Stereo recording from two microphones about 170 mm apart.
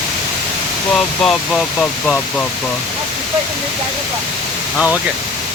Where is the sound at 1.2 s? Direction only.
5° left (ahead or behind).